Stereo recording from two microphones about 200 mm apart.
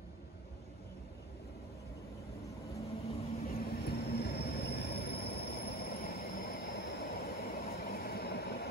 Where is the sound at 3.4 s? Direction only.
45° left (ahead or behind).